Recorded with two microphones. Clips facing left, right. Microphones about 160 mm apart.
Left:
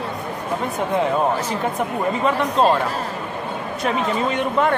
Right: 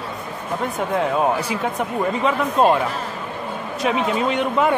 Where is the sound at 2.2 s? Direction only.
10° right (ahead or behind).